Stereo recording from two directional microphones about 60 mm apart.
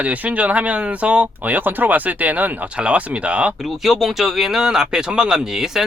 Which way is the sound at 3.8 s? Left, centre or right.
Centre.